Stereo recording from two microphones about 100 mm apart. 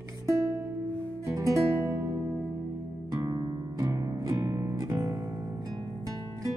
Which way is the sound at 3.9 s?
30° right (ahead or behind).